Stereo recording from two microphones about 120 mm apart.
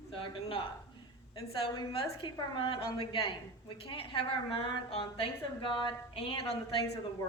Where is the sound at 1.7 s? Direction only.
45° left (ahead or behind).